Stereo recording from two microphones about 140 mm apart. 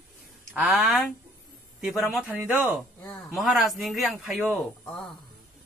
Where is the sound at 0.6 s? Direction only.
5° right (ahead or behind).